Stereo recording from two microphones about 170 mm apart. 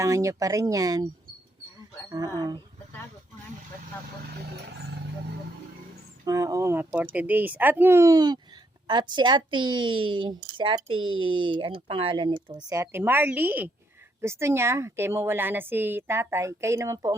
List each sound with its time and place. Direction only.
0.0 s speech: 20° right (ahead or behind)
2.0 s speech: 20° right (ahead or behind)
6.2 s a woman's voice: 20° right (ahead or behind)